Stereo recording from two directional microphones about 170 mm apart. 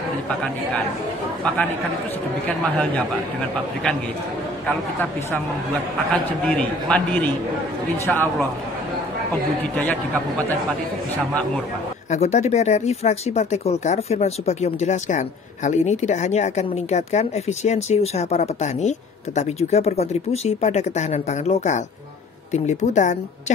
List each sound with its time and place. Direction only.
6.5 s a man's voice: 5° left (ahead or behind)
9.6 s a man's voice: 10° left (ahead or behind)
12.1 s speech: 40° left (ahead or behind)